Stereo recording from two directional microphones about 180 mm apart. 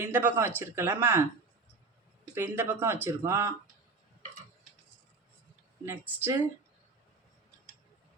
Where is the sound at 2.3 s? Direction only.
15° right (ahead or behind).